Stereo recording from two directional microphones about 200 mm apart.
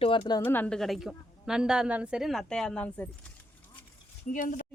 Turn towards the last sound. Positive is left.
turn(degrees=40)  # may be behind; listen again after turning